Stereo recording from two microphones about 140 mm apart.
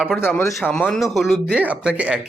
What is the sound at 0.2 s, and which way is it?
Speech, 15° left (ahead or behind).